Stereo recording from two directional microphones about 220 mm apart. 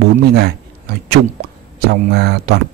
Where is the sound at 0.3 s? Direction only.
45° right (ahead or behind).